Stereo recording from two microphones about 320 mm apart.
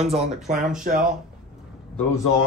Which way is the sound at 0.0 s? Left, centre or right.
Centre.